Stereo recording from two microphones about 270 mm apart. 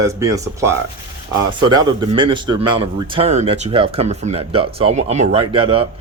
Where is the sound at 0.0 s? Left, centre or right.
Centre.